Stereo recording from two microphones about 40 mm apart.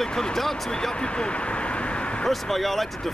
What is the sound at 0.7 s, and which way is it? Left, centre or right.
Speech, centre.